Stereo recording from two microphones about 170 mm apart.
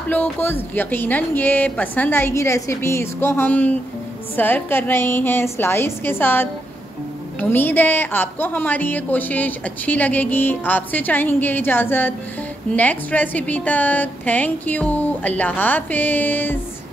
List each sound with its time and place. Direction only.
0.1 s a woman's voice: 10° left (ahead or behind)